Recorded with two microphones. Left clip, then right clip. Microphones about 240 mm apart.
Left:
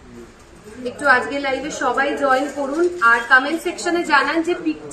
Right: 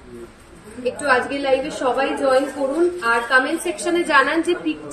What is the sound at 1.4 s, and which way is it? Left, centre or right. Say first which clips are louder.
A woman's voice: right 2 dB; centre.